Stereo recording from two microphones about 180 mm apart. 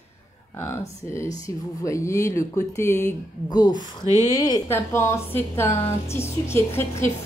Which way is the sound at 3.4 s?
20° left (ahead or behind).